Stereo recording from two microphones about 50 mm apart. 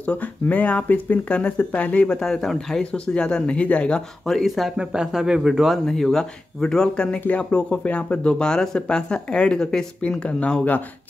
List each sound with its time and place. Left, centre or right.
0.0 s speech: left
2.1 s speech: centre; by 3.9 s left
4.3 s speech: centre
4.7 s a man's voice: centre
5.9 s speech: centre
10.2 s speech: left